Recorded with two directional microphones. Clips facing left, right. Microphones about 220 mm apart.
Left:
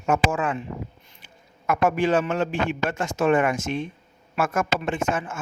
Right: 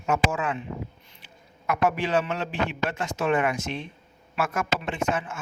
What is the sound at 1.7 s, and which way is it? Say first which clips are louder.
Speech: left 3 dB; 50° left (ahead or behind).